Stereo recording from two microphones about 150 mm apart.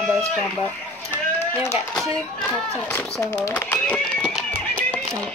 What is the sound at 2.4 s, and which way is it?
Speech, 10° left (ahead or behind).